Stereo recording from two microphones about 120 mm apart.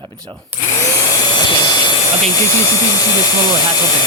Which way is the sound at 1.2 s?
35° left (ahead or behind).